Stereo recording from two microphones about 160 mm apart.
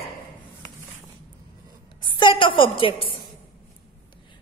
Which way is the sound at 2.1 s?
30° left (ahead or behind).